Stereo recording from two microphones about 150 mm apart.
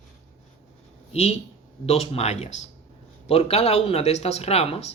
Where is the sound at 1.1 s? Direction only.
45° left (ahead or behind).